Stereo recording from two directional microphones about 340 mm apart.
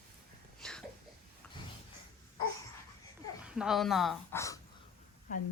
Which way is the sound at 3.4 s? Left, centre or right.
Centre.